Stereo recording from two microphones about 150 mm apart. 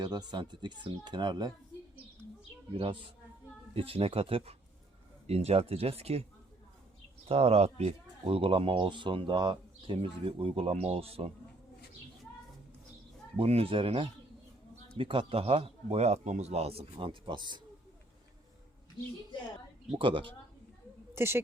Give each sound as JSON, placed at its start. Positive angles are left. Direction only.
{"t": 0.0, "sound": "speech", "side_deg": -30}
{"t": 2.7, "sound": "speech", "side_deg": -35}
{"t": 7.3, "sound": "speech", "side_deg": -40}
{"t": 13.3, "sound": "speech", "side_deg": -40}
{"t": 19.9, "sound": "speech", "side_deg": -35}
{"t": 21.1, "sound": "a woman's voice", "side_deg": -15}